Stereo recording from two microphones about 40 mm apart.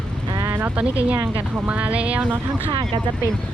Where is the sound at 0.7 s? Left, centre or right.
Right.